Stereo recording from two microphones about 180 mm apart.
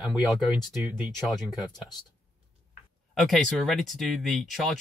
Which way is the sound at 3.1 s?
Centre (ahead or behind).